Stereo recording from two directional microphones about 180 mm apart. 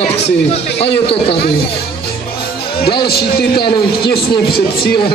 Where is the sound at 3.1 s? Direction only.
60° left (ahead or behind).